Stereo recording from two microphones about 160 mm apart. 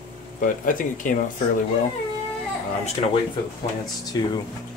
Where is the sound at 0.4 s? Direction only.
55° left (ahead or behind).